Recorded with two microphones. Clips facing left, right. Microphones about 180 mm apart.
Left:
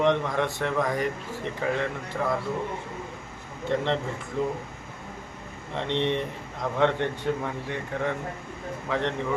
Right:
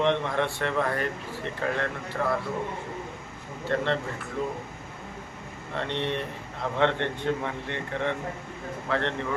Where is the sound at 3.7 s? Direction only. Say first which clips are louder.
Left 1 dB; 15° left (ahead or behind).